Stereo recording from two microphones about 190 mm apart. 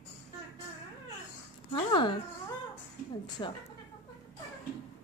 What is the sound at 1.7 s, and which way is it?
Speech, 25° left (ahead or behind).